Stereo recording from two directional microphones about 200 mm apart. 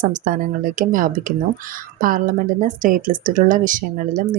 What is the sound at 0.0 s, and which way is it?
Speech, 45° right (ahead or behind).